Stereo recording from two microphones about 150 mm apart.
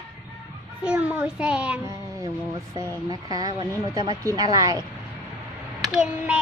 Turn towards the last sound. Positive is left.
turn(degrees=-5)  # may be behind; listen again after turning